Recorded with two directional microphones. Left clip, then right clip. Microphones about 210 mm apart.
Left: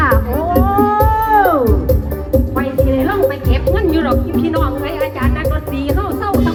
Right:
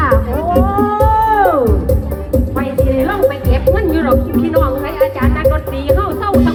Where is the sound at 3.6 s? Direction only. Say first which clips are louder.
Right 1 dB; 15° right (ahead or behind).